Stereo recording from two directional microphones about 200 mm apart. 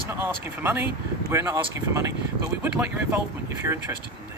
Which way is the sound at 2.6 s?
10° right (ahead or behind).